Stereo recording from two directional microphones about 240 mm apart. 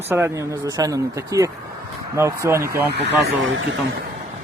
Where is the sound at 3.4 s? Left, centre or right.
Right.